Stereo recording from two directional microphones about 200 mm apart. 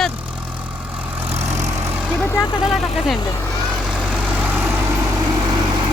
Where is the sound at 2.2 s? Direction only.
15° left (ahead or behind).